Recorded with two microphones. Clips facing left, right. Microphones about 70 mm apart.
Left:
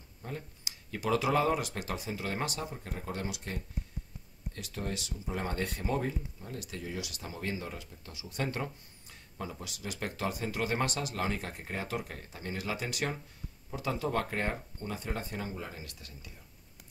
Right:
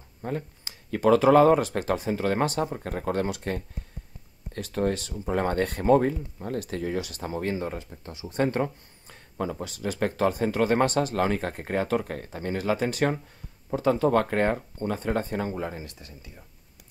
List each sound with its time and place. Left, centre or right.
0.2 s speech: right
15.8 s speech: right